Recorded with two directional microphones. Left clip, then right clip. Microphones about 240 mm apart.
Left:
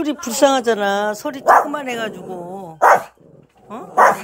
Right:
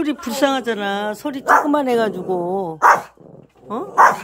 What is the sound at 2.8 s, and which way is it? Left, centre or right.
Dog, left.